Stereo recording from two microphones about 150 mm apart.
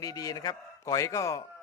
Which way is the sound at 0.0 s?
25° left (ahead or behind).